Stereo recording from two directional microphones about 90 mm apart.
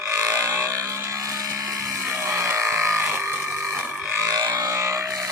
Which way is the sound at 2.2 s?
30° right (ahead or behind).